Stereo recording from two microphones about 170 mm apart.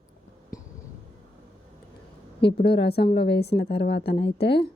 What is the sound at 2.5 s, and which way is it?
A woman's voice, 75° left (ahead or behind).